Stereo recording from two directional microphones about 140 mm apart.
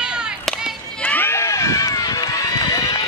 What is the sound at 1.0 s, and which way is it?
Run, 10° left (ahead or behind).